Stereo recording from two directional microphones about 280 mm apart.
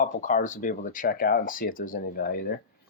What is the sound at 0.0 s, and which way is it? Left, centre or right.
Speech, left.